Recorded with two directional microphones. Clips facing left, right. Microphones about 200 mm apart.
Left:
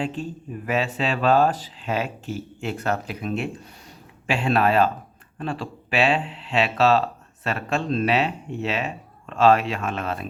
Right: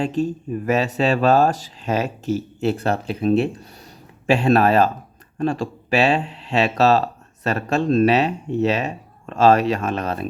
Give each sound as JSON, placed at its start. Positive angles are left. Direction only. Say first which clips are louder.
{"t": 0.0, "sound": "speech", "louder": "right 7 dB", "side_deg": -40}